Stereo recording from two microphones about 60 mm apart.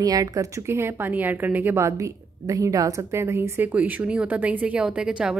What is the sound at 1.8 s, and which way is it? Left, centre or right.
A woman's voice, right.